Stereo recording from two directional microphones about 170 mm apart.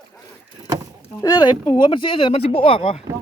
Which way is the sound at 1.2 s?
25° left (ahead or behind).